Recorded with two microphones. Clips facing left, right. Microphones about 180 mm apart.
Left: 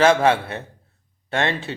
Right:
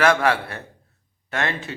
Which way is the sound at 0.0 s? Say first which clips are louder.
Left 3 dB; 25° left (ahead or behind).